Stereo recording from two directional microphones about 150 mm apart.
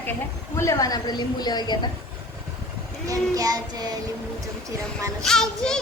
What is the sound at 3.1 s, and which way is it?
Child singing, 25° right (ahead or behind).